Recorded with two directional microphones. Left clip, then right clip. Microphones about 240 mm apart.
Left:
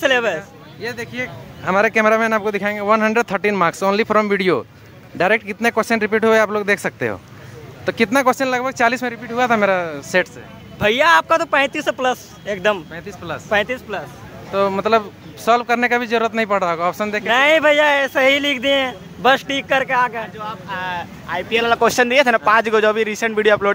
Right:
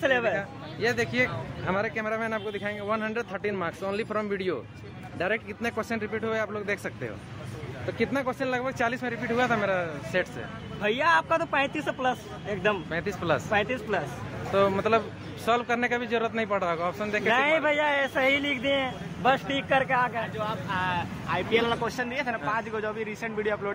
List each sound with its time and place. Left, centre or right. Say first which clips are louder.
0.0 s speech: left 8 dB; left
0.4 s speech: even; centre
1.7 s speech: left 14 dB; left
10.8 s speech: left 10 dB; left
12.9 s speech: right 1 dB; centre
13.5 s speech: left 13 dB; left
14.5 s speech: left 7 dB; left
17.3 s speech: left 11 dB; left